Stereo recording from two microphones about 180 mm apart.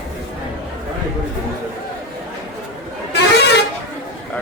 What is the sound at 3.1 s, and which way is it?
Vehicle, 70° left (ahead or behind).